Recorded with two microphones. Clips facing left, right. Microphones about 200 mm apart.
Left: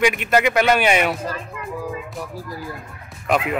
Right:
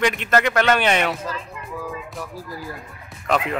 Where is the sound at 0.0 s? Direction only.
10° left (ahead or behind).